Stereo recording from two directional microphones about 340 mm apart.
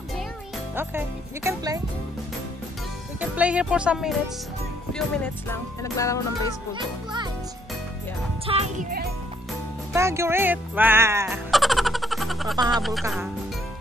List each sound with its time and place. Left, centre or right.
0.7 s speech: centre
3.2 s speech: centre
4.9 s music: centre
6.7 s speech: centre
8.5 s music: centre
9.9 s speech: centre